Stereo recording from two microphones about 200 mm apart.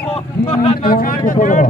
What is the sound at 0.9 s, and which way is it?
Speech, 45° left (ahead or behind).